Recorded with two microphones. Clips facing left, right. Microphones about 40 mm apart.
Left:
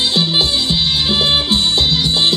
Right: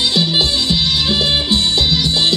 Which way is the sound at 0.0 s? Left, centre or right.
Left.